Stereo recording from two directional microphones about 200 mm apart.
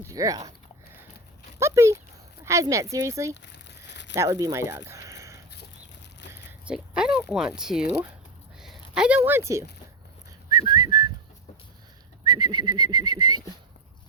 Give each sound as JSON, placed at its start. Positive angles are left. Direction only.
{"t": 0.0, "sound": "speech", "side_deg": -15}
{"t": 1.5, "sound": "a sound", "side_deg": -15}
{"t": 2.4, "sound": "speech", "side_deg": -15}
{"t": 3.4, "sound": "crumpling", "side_deg": 60}
{"t": 4.1, "sound": "speech", "side_deg": -15}
{"t": 4.9, "sound": "a sound", "side_deg": -15}
{"t": 6.3, "sound": "speech", "side_deg": -5}
{"t": 10.8, "sound": "whistling", "side_deg": -20}
{"t": 12.2, "sound": "bird", "side_deg": -20}